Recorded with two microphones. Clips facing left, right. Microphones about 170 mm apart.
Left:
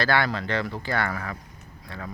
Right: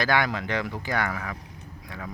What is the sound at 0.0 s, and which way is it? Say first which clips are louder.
Speech: left 1 dB; 15° right (ahead or behind).